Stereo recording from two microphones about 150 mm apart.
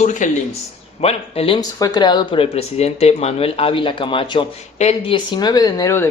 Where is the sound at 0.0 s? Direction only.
55° left (ahead or behind).